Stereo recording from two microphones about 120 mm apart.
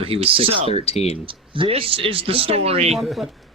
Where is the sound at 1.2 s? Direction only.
45° right (ahead or behind).